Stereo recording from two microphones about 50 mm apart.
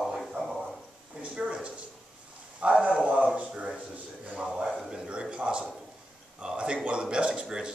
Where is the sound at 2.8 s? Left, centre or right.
Right.